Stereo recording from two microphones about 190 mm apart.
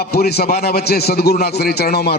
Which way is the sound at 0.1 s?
55° left (ahead or behind).